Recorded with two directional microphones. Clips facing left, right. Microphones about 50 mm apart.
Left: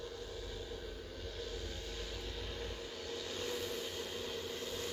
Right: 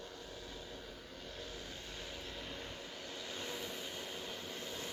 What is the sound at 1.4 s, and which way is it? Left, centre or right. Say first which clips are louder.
Vehicle: left 4 dB; right.